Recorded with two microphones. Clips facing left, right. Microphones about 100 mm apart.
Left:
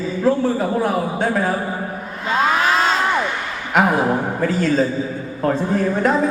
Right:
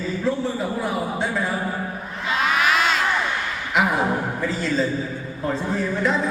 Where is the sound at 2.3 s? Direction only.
35° left (ahead or behind).